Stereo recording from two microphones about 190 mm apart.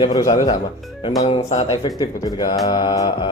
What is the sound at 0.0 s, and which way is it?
Mantra, 20° left (ahead or behind).